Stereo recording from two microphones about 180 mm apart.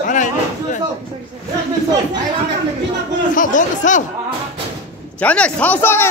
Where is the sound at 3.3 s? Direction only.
45° left (ahead or behind).